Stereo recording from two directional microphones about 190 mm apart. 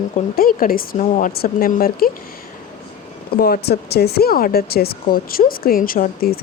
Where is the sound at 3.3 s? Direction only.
55° left (ahead or behind).